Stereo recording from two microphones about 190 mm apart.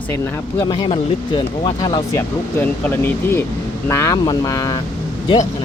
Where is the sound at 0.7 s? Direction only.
25° left (ahead or behind).